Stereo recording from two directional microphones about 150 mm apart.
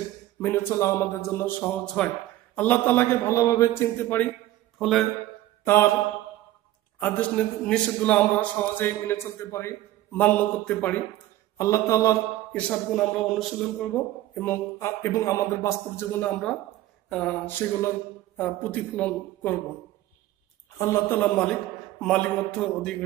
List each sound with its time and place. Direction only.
0.4 s a man's voice: 15° left (ahead or behind)
4.7 s speech: centre (ahead or behind)
7.0 s a man's voice: 10° left (ahead or behind)
11.5 s a man's voice: 20° left (ahead or behind)
12.5 s speech: 5° left (ahead or behind)
14.4 s a man's voice: 15° left (ahead or behind)
20.7 s a man's voice: 20° left (ahead or behind)